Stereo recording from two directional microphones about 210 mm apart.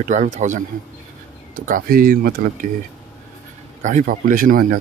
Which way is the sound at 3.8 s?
40° right (ahead or behind).